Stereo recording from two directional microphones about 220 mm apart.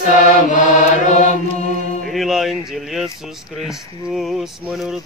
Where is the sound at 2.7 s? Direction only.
Centre (ahead or behind).